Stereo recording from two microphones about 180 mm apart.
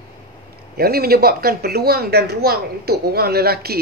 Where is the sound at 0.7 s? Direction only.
60° right (ahead or behind).